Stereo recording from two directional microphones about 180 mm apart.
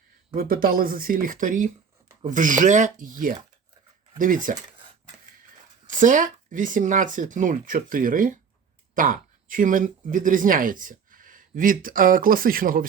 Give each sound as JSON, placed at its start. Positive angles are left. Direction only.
{"t": 0.3, "sound": "speech", "side_deg": -55}
{"t": 5.8, "sound": "speech", "side_deg": -45}